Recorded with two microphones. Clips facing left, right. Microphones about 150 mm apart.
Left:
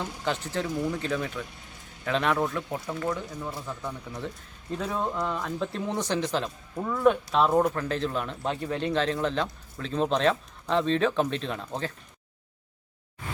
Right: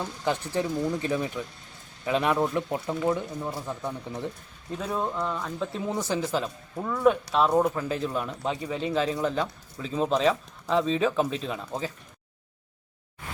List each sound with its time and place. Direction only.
0.0 s speech: 15° right (ahead or behind)
4.7 s speech: 5° right (ahead or behind)